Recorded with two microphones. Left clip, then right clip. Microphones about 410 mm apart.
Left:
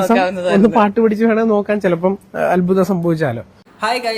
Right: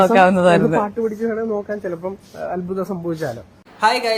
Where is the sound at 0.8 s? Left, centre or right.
Left.